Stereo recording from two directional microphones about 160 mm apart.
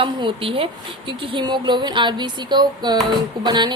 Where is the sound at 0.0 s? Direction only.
30° right (ahead or behind).